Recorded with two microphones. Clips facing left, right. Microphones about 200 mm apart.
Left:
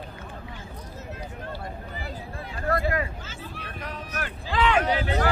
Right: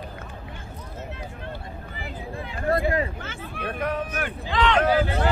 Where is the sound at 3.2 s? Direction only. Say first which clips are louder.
Right 5 dB; 60° right (ahead or behind).